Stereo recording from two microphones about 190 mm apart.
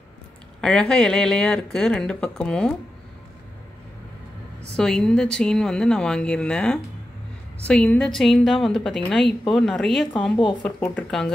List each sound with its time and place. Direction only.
0.6 s speech: 5° left (ahead or behind)
4.7 s speech: 5° left (ahead or behind)